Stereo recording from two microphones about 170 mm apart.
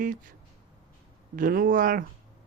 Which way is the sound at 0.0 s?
50° right (ahead or behind).